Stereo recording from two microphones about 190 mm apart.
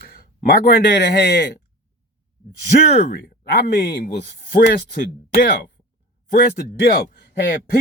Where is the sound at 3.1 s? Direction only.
55° left (ahead or behind).